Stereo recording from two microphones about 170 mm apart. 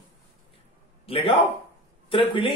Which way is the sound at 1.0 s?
35° left (ahead or behind).